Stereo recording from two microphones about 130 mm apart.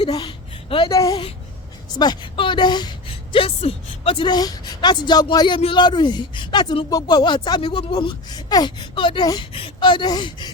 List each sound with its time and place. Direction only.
0.0 s a sound: 40° left (ahead or behind)
0.9 s a woman's voice: 25° left (ahead or behind)
2.0 s a woman's voice: 35° left (ahead or behind)
5.5 s speech: 40° left (ahead or behind)
9.5 s speech: 45° left (ahead or behind)